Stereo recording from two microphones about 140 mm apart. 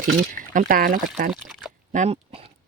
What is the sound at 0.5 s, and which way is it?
Speech, 80° right.